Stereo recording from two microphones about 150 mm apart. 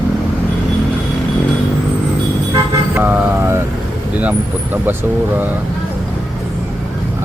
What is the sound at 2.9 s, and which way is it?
Vehicle, 15° right (ahead or behind).